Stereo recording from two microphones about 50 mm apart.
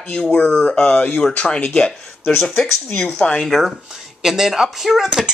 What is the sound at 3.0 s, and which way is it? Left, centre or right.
Speech, centre.